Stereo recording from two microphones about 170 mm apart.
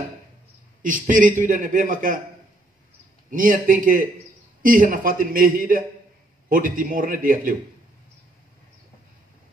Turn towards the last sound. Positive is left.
turn(degrees=-55)  # may be behind; listen again after turning